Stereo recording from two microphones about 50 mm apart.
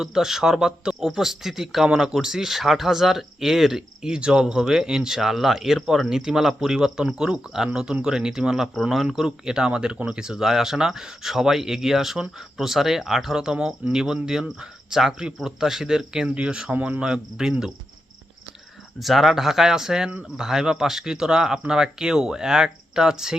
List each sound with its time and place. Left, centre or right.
0.0 s speech: centre
16.7 s cricket: right
17.0 s speech: centre
18.9 s speech: centre